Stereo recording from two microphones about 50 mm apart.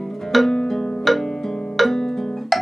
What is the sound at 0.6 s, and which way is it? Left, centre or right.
Zither, centre.